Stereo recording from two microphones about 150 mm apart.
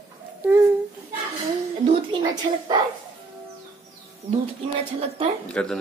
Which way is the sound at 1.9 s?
30° right (ahead or behind).